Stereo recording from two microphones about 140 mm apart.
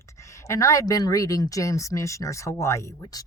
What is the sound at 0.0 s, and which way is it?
A woman's voice, 20° left (ahead or behind).